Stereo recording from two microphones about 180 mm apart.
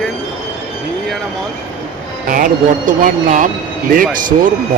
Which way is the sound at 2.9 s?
45° right (ahead or behind).